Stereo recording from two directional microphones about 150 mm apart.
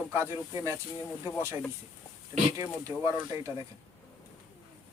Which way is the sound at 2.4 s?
20° right (ahead or behind).